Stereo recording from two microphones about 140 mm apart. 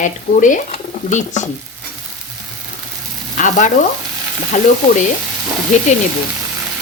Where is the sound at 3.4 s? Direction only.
65° left (ahead or behind).